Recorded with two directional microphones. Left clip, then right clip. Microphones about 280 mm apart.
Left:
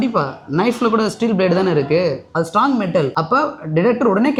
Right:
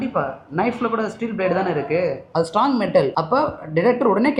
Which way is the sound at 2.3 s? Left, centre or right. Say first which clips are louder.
Left 1 dB; left.